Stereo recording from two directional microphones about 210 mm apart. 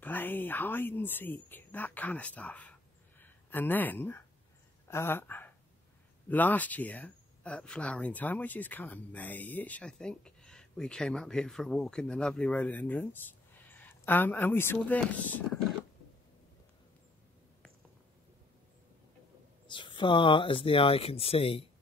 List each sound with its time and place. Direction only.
0.0 s speech: 10° left (ahead or behind)
19.7 s speech: 25° left (ahead or behind)